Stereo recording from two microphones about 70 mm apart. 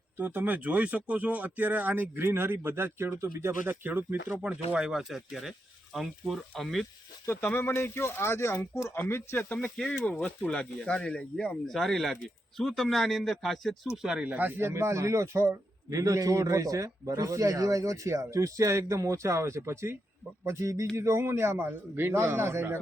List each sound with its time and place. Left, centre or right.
0.2 s speech: right
3.8 s speech: right
4.4 s speech: centre
7.3 s speech: left
9.7 s speech: centre
13.9 s speech: centre
14.3 s speech: right
14.6 s a man's voice: right